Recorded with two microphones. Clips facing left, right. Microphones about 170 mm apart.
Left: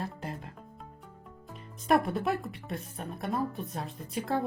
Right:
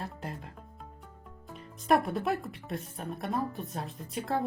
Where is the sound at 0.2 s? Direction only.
Centre (ahead or behind).